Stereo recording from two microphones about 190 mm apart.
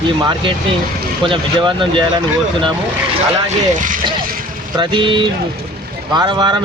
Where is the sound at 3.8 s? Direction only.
45° right (ahead or behind).